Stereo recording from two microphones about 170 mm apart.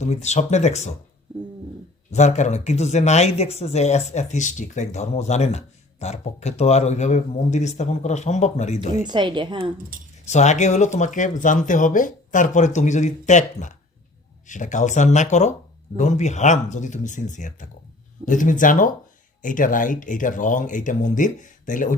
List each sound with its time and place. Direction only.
0.0 s speech: 40° left (ahead or behind)
2.0 s speech: 45° left (ahead or behind)
9.0 s a woman's voice: 25° right (ahead or behind)
9.9 s speech: 55° right (ahead or behind)
10.2 s speech: 45° left (ahead or behind)